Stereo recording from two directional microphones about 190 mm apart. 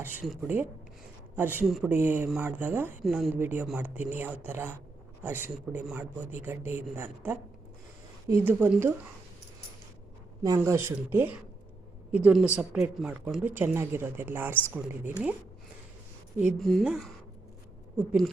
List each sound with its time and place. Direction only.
0.0 s speech: 10° right (ahead or behind)
3.3 s speech: 10° right (ahead or behind)
10.4 s speech: 15° right (ahead or behind)
16.4 s speech: centre (ahead or behind)